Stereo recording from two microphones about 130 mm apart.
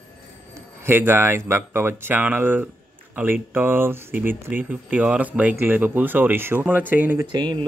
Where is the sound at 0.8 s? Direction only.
15° right (ahead or behind).